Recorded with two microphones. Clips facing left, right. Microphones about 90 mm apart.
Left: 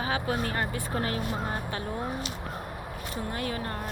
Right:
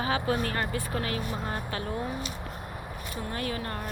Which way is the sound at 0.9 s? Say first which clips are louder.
Left 1 dB; 30° left (ahead or behind).